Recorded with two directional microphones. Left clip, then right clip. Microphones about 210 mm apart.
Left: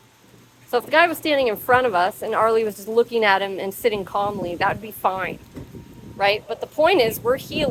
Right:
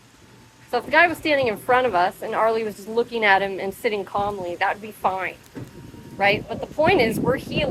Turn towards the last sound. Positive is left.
turn(degrees=30)  # may be behind; listen again after turning